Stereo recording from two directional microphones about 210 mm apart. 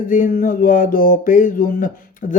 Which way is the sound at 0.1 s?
40° left (ahead or behind).